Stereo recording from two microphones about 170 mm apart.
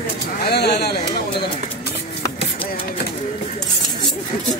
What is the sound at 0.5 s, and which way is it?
Speech, 75° left (ahead or behind).